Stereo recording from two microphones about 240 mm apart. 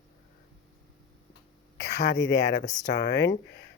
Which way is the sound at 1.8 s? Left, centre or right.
Left.